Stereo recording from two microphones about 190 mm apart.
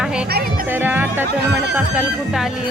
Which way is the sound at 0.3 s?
55° right (ahead or behind).